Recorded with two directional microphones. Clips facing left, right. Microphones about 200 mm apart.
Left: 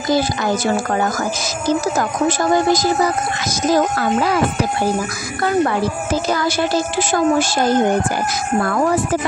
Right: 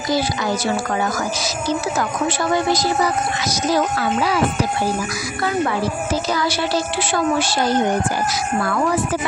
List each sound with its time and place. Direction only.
1.7 s speech: 45° left (ahead or behind)
6.2 s speech: 50° left (ahead or behind)